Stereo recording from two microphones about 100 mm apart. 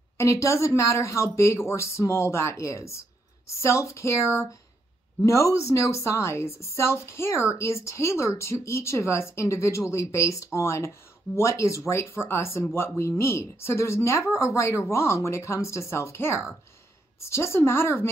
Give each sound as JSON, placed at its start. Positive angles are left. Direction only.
{"t": 0.2, "sound": "speech", "side_deg": 30}